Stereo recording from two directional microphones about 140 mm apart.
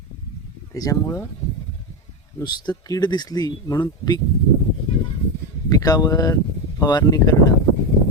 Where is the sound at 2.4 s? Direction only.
30° left (ahead or behind).